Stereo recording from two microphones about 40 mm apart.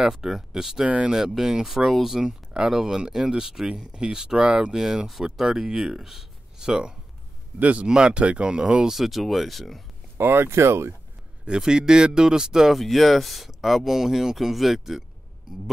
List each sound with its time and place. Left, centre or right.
0.0 s speech: centre
0.8 s speech: right
1.1 s speech: centre
2.2 s speech: centre
6.6 s speech: right
7.5 s speech: right
7.8 s speech: right
8.9 s speech: centre
10.2 s speech: right
11.4 s speech: centre
12.7 s speech: centre